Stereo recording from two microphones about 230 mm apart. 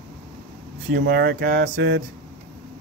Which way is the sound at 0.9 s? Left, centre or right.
Right.